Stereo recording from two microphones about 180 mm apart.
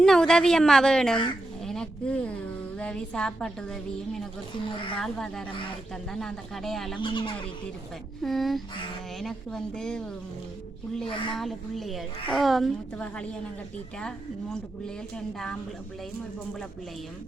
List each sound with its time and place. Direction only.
0.0 s a woman's voice: 5° left (ahead or behind)
4.5 s a woman's voice: 25° left (ahead or behind)
4.9 s a woman's voice: 5° left (ahead or behind)
5.5 s a woman's voice: 30° left (ahead or behind)
6.1 s a woman's voice: centre (ahead or behind)
7.0 s a woman's voice: 25° left (ahead or behind)
8.2 s a woman's voice: centre (ahead or behind)
11.0 s a woman's voice: 30° left (ahead or behind)
11.3 s a woman's voice: centre (ahead or behind)
14.5 s a woman's voice: 5° left (ahead or behind)